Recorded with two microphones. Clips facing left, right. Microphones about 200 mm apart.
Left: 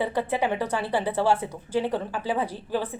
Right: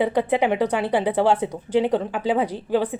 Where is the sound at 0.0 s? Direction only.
15° right (ahead or behind).